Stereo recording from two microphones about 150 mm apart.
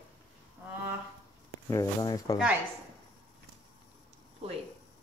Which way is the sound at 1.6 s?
25° left (ahead or behind).